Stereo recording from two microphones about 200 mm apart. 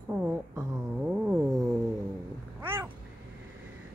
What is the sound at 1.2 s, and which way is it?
Music, centre (ahead or behind).